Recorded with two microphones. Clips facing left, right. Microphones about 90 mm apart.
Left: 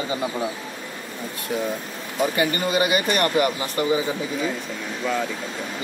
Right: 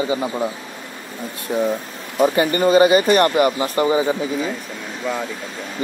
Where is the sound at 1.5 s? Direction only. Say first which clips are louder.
Right 6 dB; 25° right (ahead or behind).